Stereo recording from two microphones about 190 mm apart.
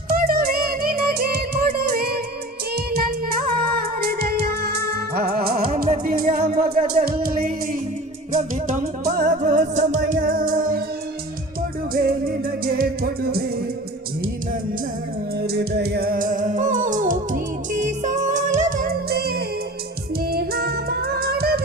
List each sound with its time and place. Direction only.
0.1 s music: 50° right (ahead or behind)
11.9 s music: 50° right (ahead or behind)
15.4 s music: 60° right (ahead or behind)